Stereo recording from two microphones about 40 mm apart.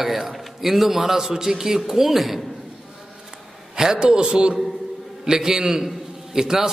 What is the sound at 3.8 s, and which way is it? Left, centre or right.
A man's voice, centre.